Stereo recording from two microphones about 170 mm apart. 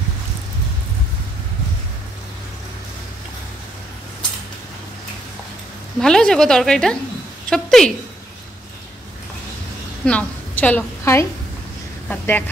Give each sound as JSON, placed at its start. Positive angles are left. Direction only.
{"t": 5.9, "sound": "a woman's voice", "side_deg": 5}
{"t": 10.0, "sound": "a woman's voice", "side_deg": 10}